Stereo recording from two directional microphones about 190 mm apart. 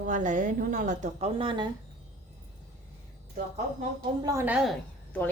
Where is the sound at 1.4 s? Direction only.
25° right (ahead or behind).